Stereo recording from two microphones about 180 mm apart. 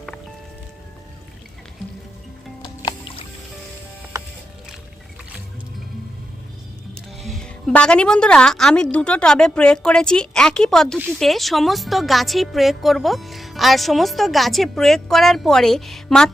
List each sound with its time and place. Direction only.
2.6 s music: 25° left (ahead or behind)
6.9 s a woman's voice: centre (ahead or behind)